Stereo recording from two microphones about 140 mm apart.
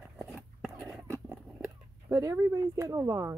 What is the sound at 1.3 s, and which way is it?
Speech, 10° right (ahead or behind).